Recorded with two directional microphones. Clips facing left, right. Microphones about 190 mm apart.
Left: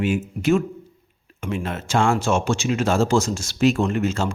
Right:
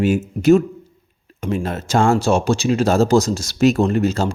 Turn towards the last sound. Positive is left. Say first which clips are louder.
# right 4 dB
turn(degrees=-35)  # may be behind; listen again after turning